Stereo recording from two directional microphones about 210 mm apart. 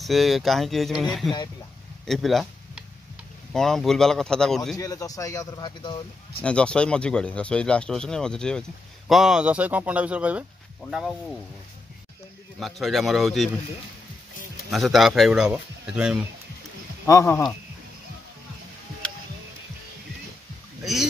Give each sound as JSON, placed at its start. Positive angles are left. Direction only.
{"t": 0.0, "sound": "speech", "side_deg": 0}
{"t": 2.0, "sound": "a sound", "side_deg": 0}
{"t": 3.5, "sound": "speech", "side_deg": 0}
{"t": 4.7, "sound": "speech", "side_deg": 15}
{"t": 6.4, "sound": "speech", "side_deg": 5}
{"t": 12.5, "sound": "speech", "side_deg": 0}
{"t": 14.7, "sound": "speech", "side_deg": 0}
{"t": 17.0, "sound": "speech", "side_deg": 10}
{"t": 20.8, "sound": "speech", "side_deg": 0}